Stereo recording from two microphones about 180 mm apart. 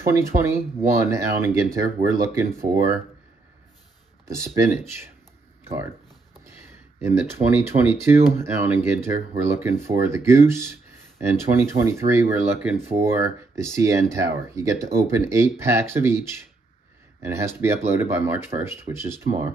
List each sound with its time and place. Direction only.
0.0 s speech: 15° right (ahead or behind)
4.3 s speech: 15° right (ahead or behind)
7.0 s speech: 15° right (ahead or behind)